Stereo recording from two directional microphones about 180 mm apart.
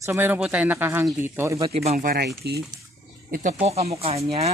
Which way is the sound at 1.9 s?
55° right (ahead or behind).